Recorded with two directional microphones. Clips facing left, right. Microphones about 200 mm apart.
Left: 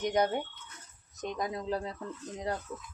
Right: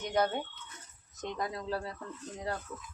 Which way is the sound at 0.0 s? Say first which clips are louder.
Left 2 dB; 15° left (ahead or behind).